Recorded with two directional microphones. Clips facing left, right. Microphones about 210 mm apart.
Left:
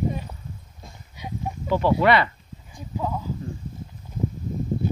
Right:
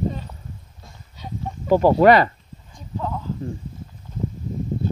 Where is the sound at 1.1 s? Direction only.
10° left (ahead or behind).